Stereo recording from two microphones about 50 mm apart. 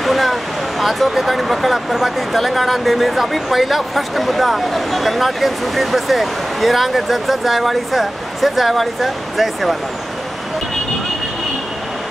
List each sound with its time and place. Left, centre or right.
0.0 s speech: centre